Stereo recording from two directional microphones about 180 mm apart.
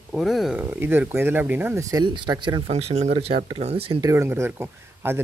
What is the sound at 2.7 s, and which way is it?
Speech, 35° right (ahead or behind).